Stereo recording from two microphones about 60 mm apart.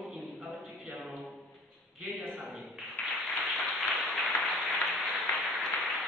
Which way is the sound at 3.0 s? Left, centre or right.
Centre.